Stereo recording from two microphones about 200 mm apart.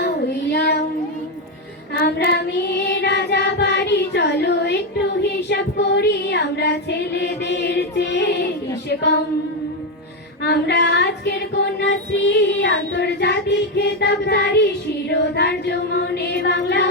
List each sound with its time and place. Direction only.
0.0 s child singing: 55° left (ahead or behind)
2.0 s child singing: 55° left (ahead or behind)
8.9 s singing: 60° left (ahead or behind)
10.4 s child singing: 60° left (ahead or behind)